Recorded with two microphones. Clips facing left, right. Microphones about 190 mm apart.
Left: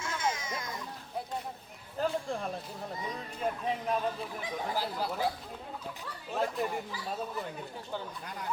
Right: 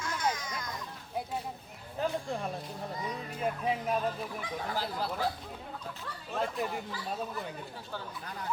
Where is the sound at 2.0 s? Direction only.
5° right (ahead or behind).